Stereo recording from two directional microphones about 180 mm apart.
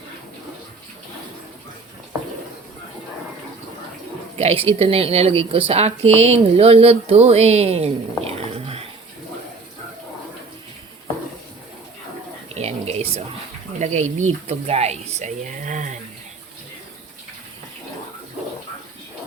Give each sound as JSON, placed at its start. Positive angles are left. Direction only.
{"t": 4.4, "sound": "a woman's voice", "side_deg": -30}
{"t": 12.5, "sound": "a sound", "side_deg": -35}
{"t": 13.7, "sound": "a woman's voice", "side_deg": -40}